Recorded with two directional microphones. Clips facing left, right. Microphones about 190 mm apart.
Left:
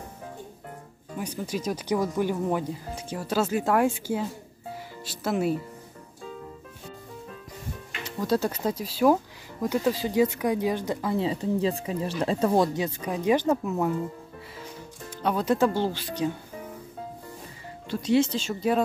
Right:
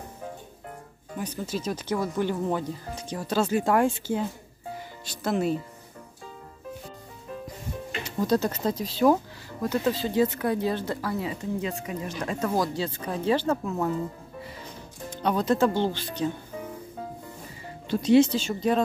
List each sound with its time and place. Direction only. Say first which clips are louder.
1.2 s speech: left 1 dB; 10° left (ahead or behind)
8.2 s speech: right 1 dB; 5° left (ahead or behind); by 12.6 s 30° left (ahead or behind)
12.7 s speech: left 1 dB; 15° left (ahead or behind)
15.2 s speech: even; 5° left (ahead or behind)
18.0 s speech: right 4 dB; 20° right (ahead or behind)
18.3 s speech: right 1 dB; centre (ahead or behind)